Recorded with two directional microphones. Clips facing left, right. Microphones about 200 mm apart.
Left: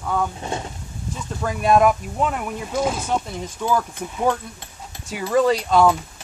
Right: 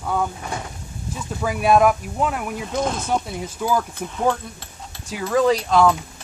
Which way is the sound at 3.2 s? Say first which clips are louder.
Even; 5° right (ahead or behind).